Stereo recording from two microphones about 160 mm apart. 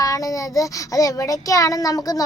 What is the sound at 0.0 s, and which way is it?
Child singing, 20° left (ahead or behind).